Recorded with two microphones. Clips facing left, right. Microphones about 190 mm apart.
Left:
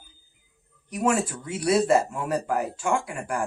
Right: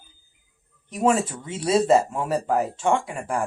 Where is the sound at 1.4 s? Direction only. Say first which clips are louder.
Right 2 dB; 25° right (ahead or behind).